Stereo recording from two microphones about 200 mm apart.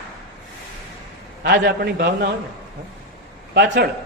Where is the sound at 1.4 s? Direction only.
55° right (ahead or behind).